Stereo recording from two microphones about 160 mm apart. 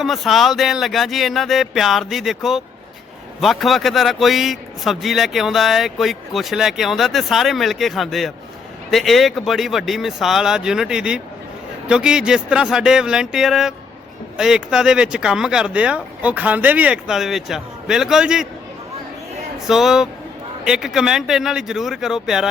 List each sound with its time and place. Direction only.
0.0 s a man's voice: centre (ahead or behind)
19.5 s a man's voice: 5° right (ahead or behind)